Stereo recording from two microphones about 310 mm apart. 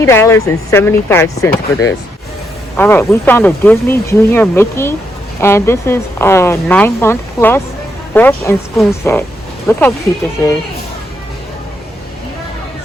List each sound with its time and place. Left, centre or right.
0.0 s speech: centre